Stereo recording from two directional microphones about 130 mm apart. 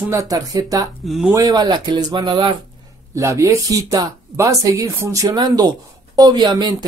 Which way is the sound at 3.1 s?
25° right (ahead or behind).